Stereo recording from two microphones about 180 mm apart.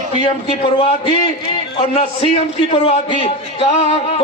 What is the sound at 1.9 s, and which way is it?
A man's voice, 30° left (ahead or behind).